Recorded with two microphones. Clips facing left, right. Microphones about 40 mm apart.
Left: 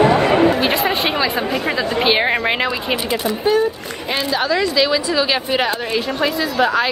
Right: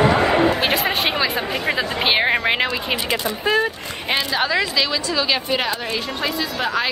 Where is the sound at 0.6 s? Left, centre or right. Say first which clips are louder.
Left 2 dB; centre.